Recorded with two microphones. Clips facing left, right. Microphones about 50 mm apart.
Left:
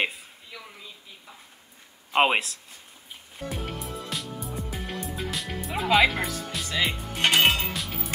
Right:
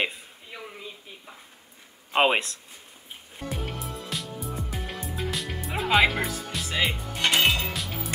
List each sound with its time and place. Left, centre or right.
0.5 s a sound: right
2.1 s speech: centre
3.3 s music: centre
7.2 s music: left
7.7 s music: centre